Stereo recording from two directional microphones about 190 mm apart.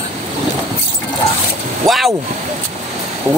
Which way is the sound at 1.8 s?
Centre (ahead or behind).